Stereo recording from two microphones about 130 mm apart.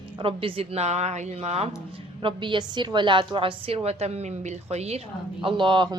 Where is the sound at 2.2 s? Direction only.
40° right (ahead or behind).